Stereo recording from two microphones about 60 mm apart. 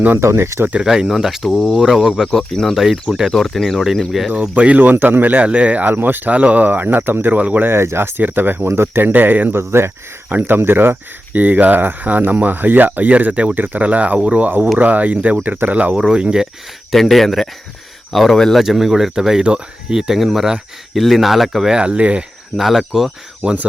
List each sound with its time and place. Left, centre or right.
0.2 s speech: right
0.9 s speech: centre
2.3 s speech: centre
4.3 s speech: right
7.7 s speech: right
9.6 s speech: right
10.2 s speech: right
16.0 s speech: centre
16.9 s speech: centre
18.6 s speech: centre
21.8 s speech: centre
22.5 s speech: centre
23.4 s speech: right